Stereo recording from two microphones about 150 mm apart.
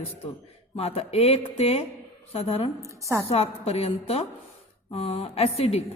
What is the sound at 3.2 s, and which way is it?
A woman's voice, 40° left (ahead or behind).